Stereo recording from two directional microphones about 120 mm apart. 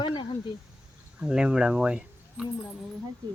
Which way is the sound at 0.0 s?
40° left (ahead or behind).